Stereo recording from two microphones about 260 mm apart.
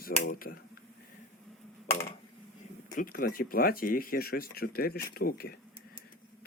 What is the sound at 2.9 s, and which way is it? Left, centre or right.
Speech, left.